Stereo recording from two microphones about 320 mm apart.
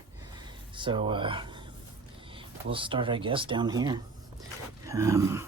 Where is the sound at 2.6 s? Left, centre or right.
Centre.